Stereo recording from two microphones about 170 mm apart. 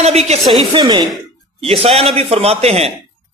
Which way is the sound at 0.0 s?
40° right (ahead or behind).